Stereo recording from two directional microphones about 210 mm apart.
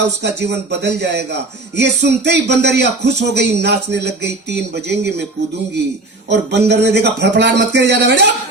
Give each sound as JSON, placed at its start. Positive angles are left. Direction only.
{"t": 0.2, "sound": "speech", "side_deg": -55}
{"t": 6.5, "sound": "speech", "side_deg": -55}